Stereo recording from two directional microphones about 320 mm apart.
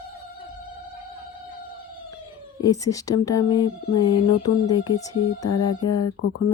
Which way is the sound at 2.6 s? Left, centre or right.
Centre.